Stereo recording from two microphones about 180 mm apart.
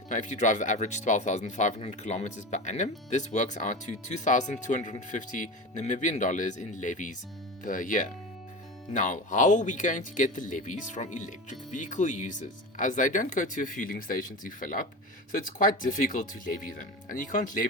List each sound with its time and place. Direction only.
0.1 s speech: 45° left (ahead or behind)